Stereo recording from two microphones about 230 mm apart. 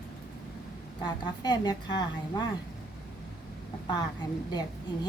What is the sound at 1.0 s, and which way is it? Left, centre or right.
A child's voice, centre.